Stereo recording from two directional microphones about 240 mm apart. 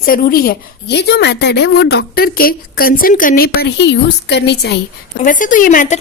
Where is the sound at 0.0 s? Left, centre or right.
Left.